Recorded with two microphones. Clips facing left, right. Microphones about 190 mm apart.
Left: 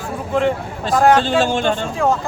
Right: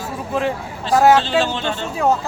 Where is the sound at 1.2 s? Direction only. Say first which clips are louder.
Left 3 dB; 45° left (ahead or behind).